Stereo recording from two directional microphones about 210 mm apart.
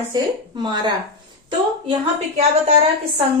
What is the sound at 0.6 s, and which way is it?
Speech, 20° right (ahead or behind).